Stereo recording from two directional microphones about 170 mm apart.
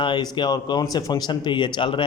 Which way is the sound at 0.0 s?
30° left (ahead or behind).